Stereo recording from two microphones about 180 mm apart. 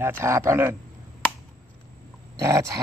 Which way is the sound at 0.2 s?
15° right (ahead or behind).